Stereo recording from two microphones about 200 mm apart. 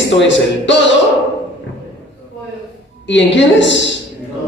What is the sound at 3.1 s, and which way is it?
Speech, 65° left (ahead or behind).